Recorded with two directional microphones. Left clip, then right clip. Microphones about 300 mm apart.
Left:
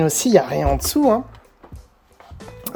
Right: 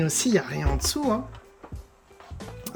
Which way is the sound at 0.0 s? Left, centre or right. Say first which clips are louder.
Left 9 dB; centre.